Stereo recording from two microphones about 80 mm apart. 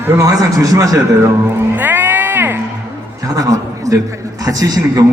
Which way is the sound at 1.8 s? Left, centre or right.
Right.